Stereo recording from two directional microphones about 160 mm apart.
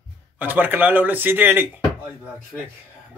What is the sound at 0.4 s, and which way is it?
Speech, 10° right (ahead or behind).